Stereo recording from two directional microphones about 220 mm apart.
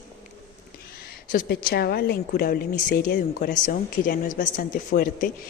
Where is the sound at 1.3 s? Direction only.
45° left (ahead or behind).